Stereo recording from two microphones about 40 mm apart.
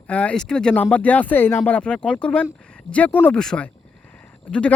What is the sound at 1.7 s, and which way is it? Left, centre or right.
Speech, left.